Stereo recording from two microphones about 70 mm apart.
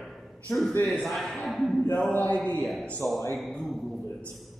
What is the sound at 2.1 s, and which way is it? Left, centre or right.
Speech, left.